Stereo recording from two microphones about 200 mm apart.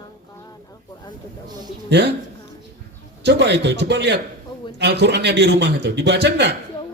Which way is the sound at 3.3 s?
60° right (ahead or behind).